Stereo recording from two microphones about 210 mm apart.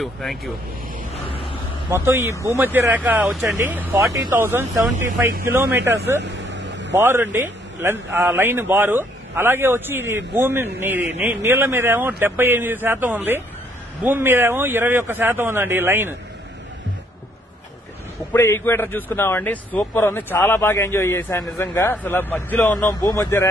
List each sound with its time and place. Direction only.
0.0 s speech: centre (ahead or behind)
1.1 s a sound: 25° left (ahead or behind)
1.9 s a man's voice: 10° right (ahead or behind)
6.2 s vehicle: 60° right (ahead or behind)
7.0 s a man's voice: 10° right (ahead or behind)
18.3 s a man's voice: 10° left (ahead or behind)